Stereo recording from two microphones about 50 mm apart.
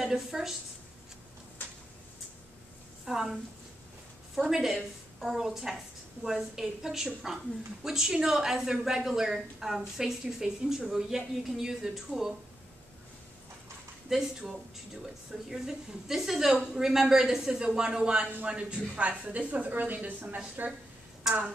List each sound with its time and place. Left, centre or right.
0.0 s speech: centre
3.1 s speech: centre
4.4 s speech: centre
14.1 s speech: centre
15.5 s a woman's voice: centre; by 20.7 s right
21.2 s a sound: centre